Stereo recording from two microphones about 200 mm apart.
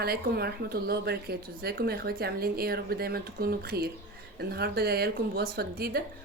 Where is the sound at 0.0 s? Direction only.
50° right (ahead or behind).